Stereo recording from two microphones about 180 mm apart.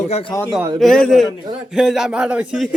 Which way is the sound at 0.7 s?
Centre (ahead or behind).